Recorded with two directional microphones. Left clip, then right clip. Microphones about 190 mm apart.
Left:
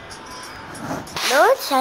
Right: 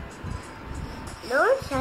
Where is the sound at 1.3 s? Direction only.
35° left (ahead or behind).